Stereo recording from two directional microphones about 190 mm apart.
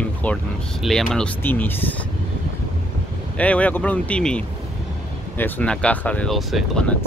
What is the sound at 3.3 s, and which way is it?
Speech, 5° left (ahead or behind).